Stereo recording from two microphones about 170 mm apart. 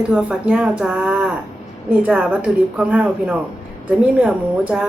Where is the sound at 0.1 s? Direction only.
5° right (ahead or behind).